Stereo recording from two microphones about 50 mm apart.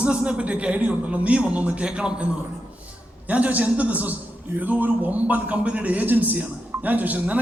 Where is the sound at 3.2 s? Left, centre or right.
Right.